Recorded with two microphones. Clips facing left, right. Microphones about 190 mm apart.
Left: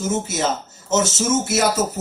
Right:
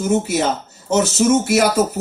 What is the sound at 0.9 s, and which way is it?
Speech, 60° right (ahead or behind).